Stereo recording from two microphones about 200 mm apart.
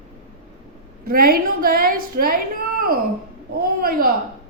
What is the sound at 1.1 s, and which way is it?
A woman's voice, 45° right (ahead or behind).